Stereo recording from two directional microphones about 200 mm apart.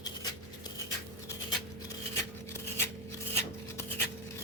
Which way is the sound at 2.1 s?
10° left (ahead or behind).